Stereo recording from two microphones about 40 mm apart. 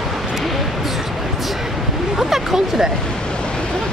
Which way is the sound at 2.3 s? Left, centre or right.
Centre.